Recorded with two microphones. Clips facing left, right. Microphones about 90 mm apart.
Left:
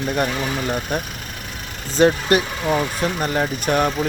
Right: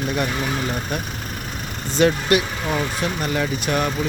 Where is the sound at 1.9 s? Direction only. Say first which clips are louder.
Left 2 dB; 40° left (ahead or behind).